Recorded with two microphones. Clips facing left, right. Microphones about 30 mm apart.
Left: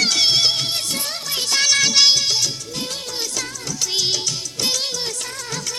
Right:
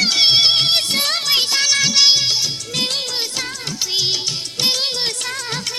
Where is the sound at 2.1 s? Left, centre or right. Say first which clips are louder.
Right 2 dB; right.